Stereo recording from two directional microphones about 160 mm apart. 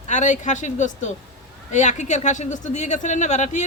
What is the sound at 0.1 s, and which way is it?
Speech, 50° left (ahead or behind).